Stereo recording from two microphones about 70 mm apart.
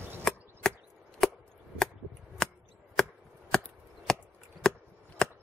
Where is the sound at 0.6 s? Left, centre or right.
Centre.